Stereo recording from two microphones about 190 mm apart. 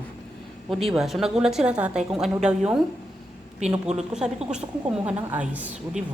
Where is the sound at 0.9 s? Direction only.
Centre (ahead or behind).